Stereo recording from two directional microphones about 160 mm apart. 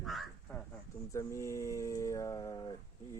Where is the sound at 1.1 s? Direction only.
20° left (ahead or behind).